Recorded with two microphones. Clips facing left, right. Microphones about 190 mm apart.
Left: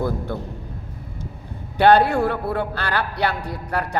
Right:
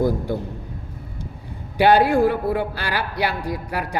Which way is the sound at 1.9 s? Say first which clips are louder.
Right 1 dB; 65° left (ahead or behind).